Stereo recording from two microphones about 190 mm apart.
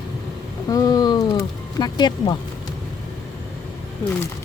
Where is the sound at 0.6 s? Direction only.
20° left (ahead or behind).